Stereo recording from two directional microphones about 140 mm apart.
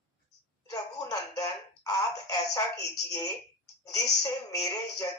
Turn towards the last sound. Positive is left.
turn(degrees=25)  # may be behind; listen again after turning